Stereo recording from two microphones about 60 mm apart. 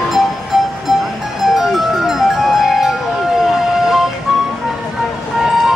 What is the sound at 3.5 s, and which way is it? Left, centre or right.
Vehicle, centre.